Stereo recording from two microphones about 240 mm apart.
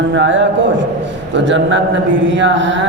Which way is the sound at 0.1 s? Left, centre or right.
Right.